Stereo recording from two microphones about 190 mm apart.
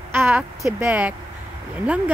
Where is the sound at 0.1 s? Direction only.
10° right (ahead or behind).